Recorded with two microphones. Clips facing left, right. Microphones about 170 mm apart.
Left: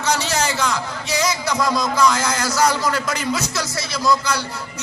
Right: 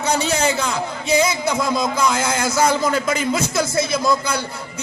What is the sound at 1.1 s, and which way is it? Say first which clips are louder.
A man's voice: right 4 dB; 55° right (ahead or behind).